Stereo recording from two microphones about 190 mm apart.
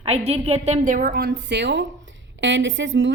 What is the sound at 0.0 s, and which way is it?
A woman's voice, 35° right (ahead or behind).